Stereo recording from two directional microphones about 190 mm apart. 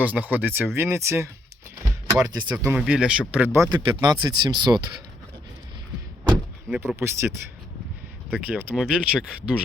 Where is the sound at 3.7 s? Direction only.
25° right (ahead or behind).